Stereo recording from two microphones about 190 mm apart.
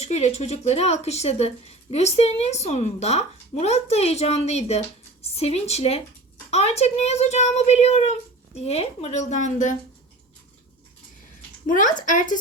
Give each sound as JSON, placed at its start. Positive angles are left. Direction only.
{"t": 0.0, "sound": "speech", "side_deg": 35}
{"t": 11.6, "sound": "speech", "side_deg": 45}